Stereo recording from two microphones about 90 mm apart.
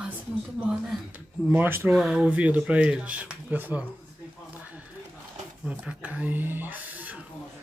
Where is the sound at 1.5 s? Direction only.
20° right (ahead or behind).